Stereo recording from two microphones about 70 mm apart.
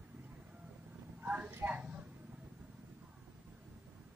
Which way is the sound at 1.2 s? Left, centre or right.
Centre.